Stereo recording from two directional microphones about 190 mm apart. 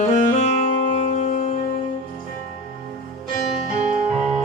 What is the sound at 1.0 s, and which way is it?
Music, 40° left (ahead or behind).